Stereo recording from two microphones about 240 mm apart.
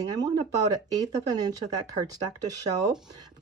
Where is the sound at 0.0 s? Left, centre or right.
Centre.